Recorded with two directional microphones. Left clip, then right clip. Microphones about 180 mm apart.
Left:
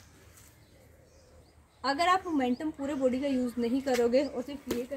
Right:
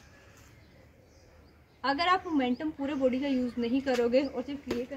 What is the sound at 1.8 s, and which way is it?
A woman's voice, 5° right (ahead or behind).